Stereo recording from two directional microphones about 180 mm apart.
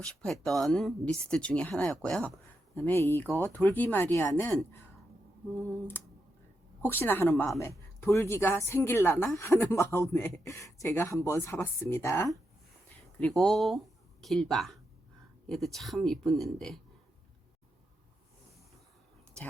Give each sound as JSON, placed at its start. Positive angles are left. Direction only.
{"t": 0.0, "sound": "speech", "side_deg": 5}
{"t": 3.2, "sound": "speech", "side_deg": -15}
{"t": 3.5, "sound": "speech", "side_deg": 10}
{"t": 6.8, "sound": "speech", "side_deg": 10}